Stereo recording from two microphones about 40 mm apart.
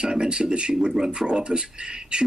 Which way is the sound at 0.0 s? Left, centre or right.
Centre.